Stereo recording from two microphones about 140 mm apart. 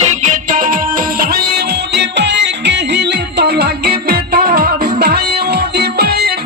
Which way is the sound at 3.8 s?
90° right.